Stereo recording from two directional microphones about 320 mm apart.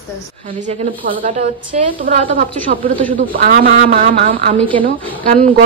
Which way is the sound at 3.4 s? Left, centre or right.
Right.